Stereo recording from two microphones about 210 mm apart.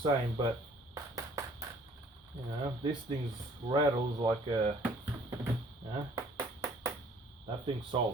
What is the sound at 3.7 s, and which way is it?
Speech, 20° right (ahead or behind).